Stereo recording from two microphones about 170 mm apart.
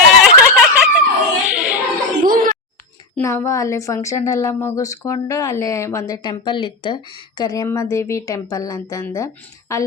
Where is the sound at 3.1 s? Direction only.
15° left (ahead or behind).